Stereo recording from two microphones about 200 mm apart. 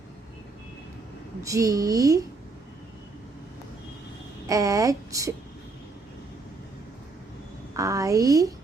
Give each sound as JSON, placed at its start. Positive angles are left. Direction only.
{"t": 1.5, "sound": "a woman's voice", "side_deg": -15}
{"t": 4.4, "sound": "a woman's voice", "side_deg": -15}
{"t": 7.8, "sound": "a woman's voice", "side_deg": -15}